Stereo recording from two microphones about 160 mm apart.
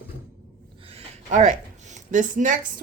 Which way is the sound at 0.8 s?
45° right (ahead or behind).